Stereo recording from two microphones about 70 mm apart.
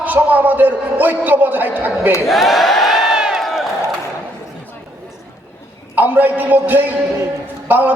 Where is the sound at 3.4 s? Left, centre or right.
Centre.